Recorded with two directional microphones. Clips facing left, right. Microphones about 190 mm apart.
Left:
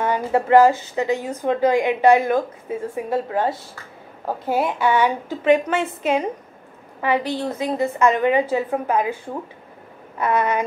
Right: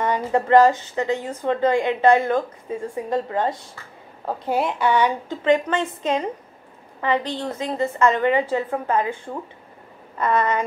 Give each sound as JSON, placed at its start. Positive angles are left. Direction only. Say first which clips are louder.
{"t": 0.0, "sound": "a woman's voice", "louder": "left 1 dB", "side_deg": 5}